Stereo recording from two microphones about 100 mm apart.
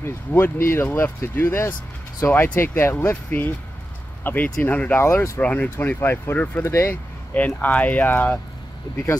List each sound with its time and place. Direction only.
0.0 s speech: 25° left (ahead or behind)
5.0 s speech: 30° left (ahead or behind)
5.4 s speech: 15° left (ahead or behind)